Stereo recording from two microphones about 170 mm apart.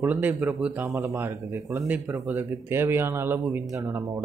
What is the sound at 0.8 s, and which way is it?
Speech, 15° right (ahead or behind).